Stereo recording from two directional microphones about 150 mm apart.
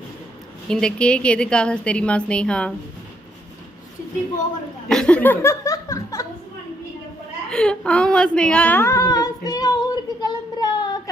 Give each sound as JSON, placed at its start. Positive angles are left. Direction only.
{"t": 0.7, "sound": "a woman's voice", "side_deg": 5}
{"t": 4.8, "sound": "a sound", "side_deg": 5}
{"t": 7.4, "sound": "female singing", "side_deg": 5}